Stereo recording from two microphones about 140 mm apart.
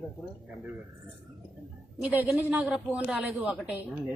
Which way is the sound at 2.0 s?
10° right (ahead or behind).